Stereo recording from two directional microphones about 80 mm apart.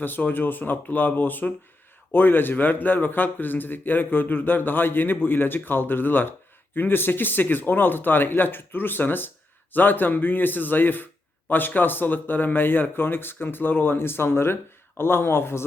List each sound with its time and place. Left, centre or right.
0.0 s a man's voice: left